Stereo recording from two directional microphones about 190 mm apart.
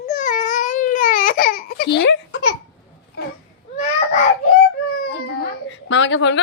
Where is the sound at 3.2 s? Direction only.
55° left (ahead or behind).